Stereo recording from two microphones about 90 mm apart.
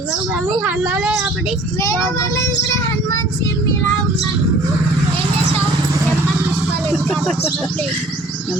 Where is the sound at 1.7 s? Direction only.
35° left (ahead or behind).